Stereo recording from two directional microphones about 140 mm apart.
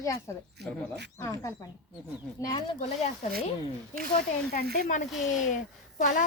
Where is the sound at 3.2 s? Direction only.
60° left (ahead or behind).